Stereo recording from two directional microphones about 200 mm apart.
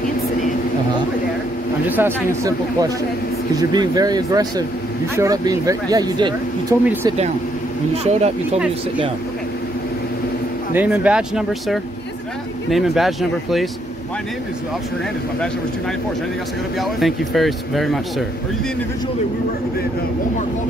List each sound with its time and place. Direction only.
1.9 s speech: 10° right (ahead or behind)
8.0 s speech: 35° right (ahead or behind)
10.7 s speech: 5° right (ahead or behind)
16.7 s speech: centre (ahead or behind)